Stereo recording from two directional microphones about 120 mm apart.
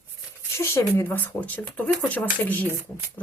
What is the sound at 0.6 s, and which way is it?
A woman's voice, 25° left (ahead or behind).